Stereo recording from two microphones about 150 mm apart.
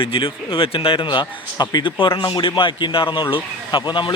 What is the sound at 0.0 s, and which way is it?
A man's voice, 35° left (ahead or behind).